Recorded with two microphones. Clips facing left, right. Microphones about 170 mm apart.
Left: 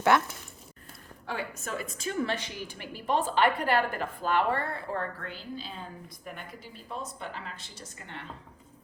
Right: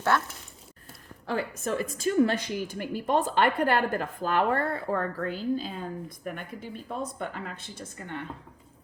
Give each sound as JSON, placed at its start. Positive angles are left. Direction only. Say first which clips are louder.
{"t": 0.1, "sound": "speech", "louder": "left 2 dB", "side_deg": 15}
{"t": 1.3, "sound": "a woman's voice", "louder": "right 6 dB", "side_deg": -40}